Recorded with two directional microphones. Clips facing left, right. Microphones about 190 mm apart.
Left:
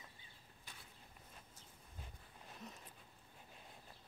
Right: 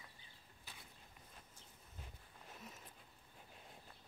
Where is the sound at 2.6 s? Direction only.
5° right (ahead or behind).